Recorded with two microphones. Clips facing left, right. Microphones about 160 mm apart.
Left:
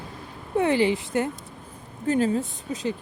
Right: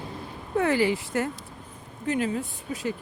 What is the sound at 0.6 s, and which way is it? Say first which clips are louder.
Speech: left 2 dB; 20° left (ahead or behind).